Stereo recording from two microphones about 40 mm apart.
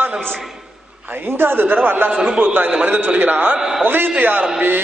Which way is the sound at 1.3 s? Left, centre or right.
Right.